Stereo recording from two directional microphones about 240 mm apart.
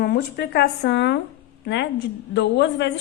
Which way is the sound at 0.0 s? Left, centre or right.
Left.